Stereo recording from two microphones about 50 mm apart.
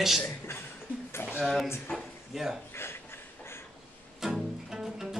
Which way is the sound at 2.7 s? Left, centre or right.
Left.